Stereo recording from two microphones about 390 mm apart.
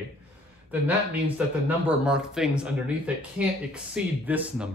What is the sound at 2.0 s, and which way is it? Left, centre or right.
Speech, centre.